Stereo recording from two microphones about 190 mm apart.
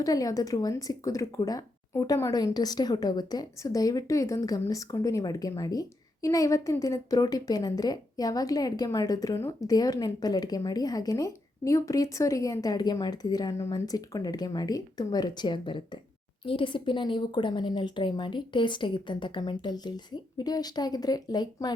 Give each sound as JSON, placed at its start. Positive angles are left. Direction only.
{"t": 0.0, "sound": "a woman's voice", "side_deg": 20}